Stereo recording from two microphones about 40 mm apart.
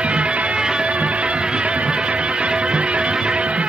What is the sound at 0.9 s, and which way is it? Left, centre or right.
Music, right.